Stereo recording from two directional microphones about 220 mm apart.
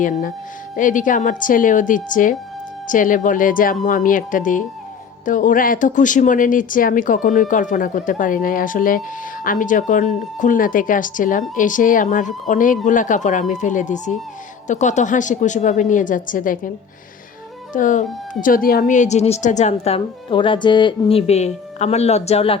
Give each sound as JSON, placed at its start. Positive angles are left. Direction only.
{"t": 0.0, "sound": "speech", "side_deg": 35}
{"t": 17.7, "sound": "a woman's voice", "side_deg": 35}